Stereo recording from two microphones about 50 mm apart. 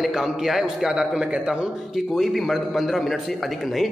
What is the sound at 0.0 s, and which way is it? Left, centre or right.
A man's voice, centre.